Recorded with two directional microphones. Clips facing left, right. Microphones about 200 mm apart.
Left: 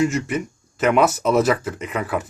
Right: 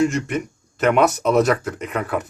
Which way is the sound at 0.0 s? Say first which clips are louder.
Right 1 dB; 5° left (ahead or behind).